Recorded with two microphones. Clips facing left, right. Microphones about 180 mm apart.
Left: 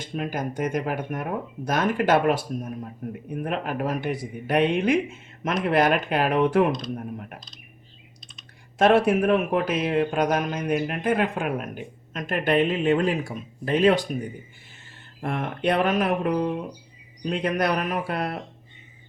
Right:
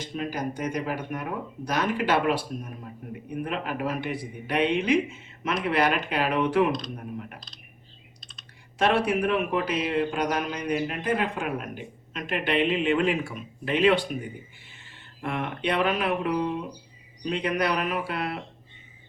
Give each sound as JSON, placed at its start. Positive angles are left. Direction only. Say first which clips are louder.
{"t": 0.0, "sound": "a man's voice", "louder": "left 1 dB", "side_deg": 50}
{"t": 8.8, "sound": "a man's voice", "louder": "left 5 dB", "side_deg": 50}
{"t": 15.2, "sound": "a man's voice", "louder": "left 3 dB", "side_deg": 45}